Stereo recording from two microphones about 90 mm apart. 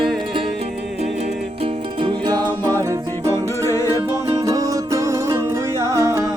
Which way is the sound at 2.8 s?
35° right (ahead or behind).